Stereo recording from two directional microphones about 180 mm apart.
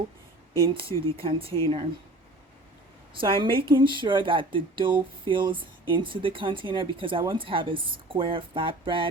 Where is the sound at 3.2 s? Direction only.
30° right (ahead or behind).